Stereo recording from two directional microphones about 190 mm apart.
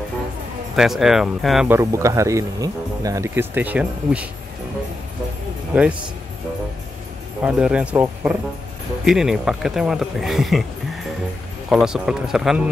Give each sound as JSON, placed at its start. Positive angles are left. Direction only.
{"t": 0.7, "sound": "speech", "side_deg": 0}
{"t": 1.8, "sound": "speech", "side_deg": -15}
{"t": 5.7, "sound": "speech", "side_deg": -5}
{"t": 7.4, "sound": "speech", "side_deg": -5}
{"t": 11.7, "sound": "speech", "side_deg": -5}